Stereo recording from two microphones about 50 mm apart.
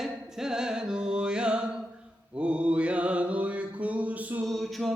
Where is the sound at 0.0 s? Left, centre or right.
Centre; by 4.4 s right.